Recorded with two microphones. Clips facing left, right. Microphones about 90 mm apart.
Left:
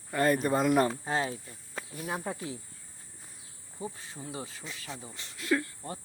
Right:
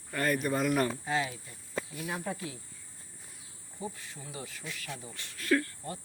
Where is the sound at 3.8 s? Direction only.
30° left (ahead or behind).